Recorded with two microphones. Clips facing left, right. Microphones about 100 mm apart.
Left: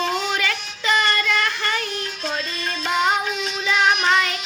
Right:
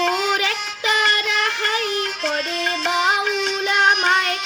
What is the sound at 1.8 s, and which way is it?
Music, 80° right.